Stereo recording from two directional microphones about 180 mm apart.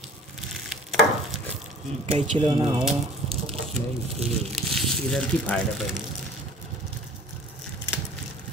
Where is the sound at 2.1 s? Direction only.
40° right (ahead or behind).